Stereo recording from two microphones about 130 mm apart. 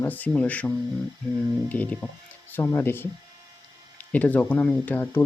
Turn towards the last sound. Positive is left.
turn(degrees=15)  # may be behind; listen again after turning